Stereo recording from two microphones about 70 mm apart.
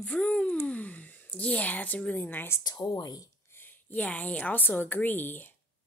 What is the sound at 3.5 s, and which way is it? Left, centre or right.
A woman's voice, left.